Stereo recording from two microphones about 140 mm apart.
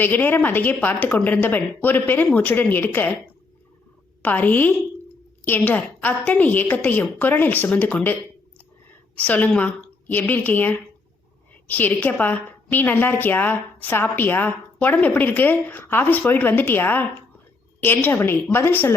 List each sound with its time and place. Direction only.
0.0 s a woman's voice: 15° left (ahead or behind)
4.2 s a woman's voice: 10° left (ahead or behind)
9.1 s a woman's voice: 10° left (ahead or behind)